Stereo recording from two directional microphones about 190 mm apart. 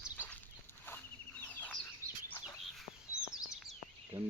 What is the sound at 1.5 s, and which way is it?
Bird, 10° left (ahead or behind).